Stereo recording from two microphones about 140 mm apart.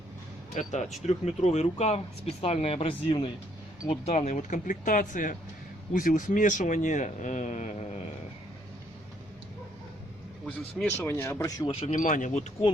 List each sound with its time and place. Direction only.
0.5 s speech: 55° left (ahead or behind); by 3.2 s 40° left (ahead or behind)
4.0 s speech: 50° left (ahead or behind)
10.4 s speech: 10° left (ahead or behind)
11.7 s speech: 45° left (ahead or behind)
11.9 s speech: 70° left (ahead or behind)